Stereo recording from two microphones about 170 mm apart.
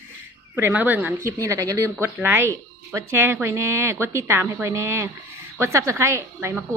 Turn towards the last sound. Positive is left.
turn(degrees=-15)  # may be behind; listen again after turning